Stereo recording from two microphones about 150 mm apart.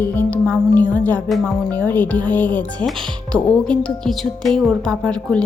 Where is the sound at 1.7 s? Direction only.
10° left (ahead or behind).